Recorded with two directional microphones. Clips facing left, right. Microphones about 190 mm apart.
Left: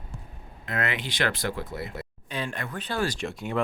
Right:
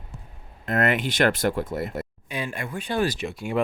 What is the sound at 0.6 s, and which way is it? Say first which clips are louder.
Speech: right 7 dB; 50° right (ahead or behind).